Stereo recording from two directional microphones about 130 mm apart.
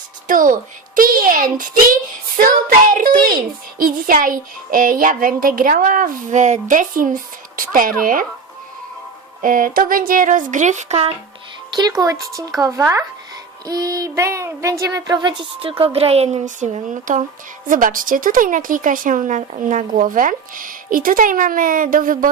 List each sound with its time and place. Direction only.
0.3 s a woman's voice: 90° right
9.4 s a woman's voice: 90° right; by 11.1 s 55° right (ahead or behind)
11.7 s a woman's voice: 30° right (ahead or behind); by 17.2 s 75° right (ahead or behind)
17.7 s a woman's voice: 90° right